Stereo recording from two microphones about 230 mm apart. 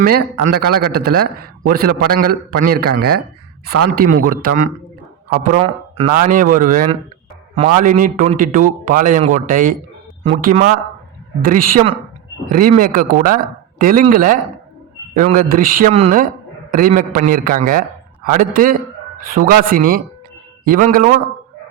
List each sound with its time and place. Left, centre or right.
0.0 s a man's voice: right